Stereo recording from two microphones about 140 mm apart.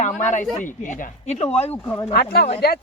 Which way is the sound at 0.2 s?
60° left (ahead or behind).